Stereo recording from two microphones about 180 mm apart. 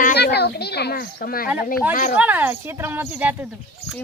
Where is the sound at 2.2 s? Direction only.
10° right (ahead or behind).